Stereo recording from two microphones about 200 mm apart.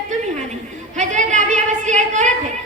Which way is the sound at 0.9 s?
35° right (ahead or behind).